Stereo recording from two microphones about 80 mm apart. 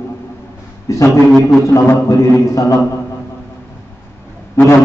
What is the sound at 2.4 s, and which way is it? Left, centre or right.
Speech, left.